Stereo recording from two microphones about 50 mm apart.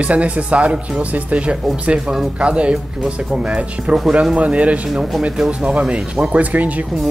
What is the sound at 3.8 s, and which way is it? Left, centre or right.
Speech, centre.